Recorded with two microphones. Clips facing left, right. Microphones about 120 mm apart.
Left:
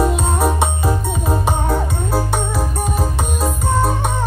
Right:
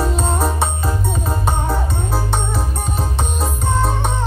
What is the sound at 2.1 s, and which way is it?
Music, centre (ahead or behind).